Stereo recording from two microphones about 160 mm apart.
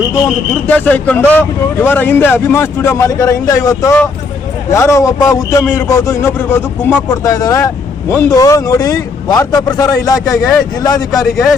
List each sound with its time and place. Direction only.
0.7 s a man's voice: 10° left (ahead or behind)